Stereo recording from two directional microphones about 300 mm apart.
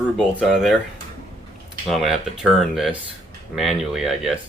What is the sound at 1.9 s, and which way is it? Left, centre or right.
Speech, centre.